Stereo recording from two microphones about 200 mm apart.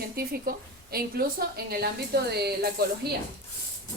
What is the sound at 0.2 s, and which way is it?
A woman's voice, 50° right (ahead or behind).